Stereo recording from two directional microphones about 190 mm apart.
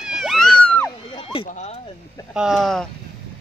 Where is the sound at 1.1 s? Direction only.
25° left (ahead or behind).